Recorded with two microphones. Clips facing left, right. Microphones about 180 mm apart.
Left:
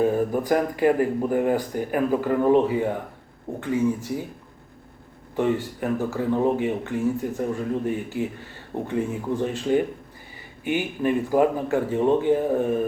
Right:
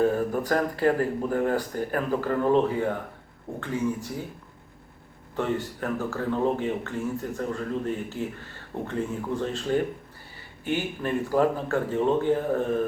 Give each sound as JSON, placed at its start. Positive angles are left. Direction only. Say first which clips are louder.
{"t": 0.0, "sound": "speech", "louder": "left 2 dB", "side_deg": 15}
{"t": 5.8, "sound": "speech", "louder": "left 4 dB", "side_deg": 15}